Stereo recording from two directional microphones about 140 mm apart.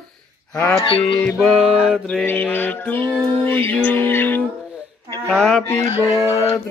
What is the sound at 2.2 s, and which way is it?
Mantra, 15° left (ahead or behind).